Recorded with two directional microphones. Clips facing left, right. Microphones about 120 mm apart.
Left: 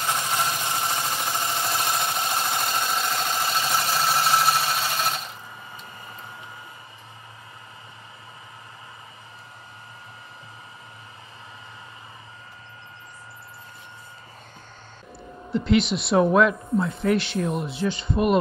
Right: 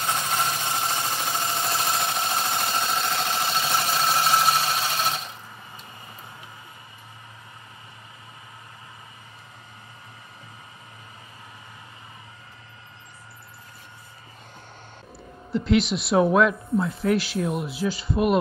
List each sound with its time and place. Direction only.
0.0 s engine: 10° left (ahead or behind)
1.4 s a sound: 10° left (ahead or behind)
3.9 s sewing machine: 5° left (ahead or behind)
15.5 s speech: centre (ahead or behind)